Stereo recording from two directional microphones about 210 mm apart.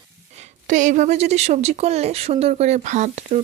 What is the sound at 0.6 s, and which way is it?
Speech, 35° right (ahead or behind).